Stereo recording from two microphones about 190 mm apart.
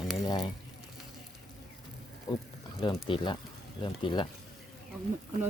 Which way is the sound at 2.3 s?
25° left (ahead or behind).